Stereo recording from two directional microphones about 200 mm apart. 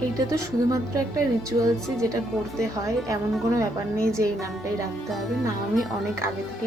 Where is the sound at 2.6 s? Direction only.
15° right (ahead or behind).